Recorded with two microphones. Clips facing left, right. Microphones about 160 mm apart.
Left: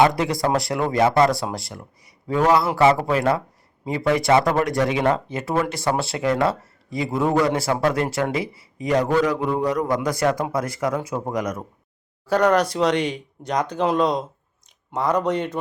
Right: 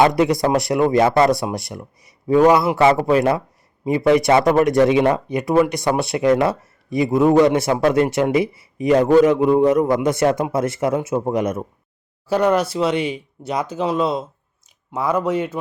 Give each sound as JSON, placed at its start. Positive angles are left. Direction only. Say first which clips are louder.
{"t": 0.0, "sound": "speech", "louder": "right 3 dB", "side_deg": -20}
{"t": 12.3, "sound": "speech", "louder": "right 1 dB", "side_deg": -10}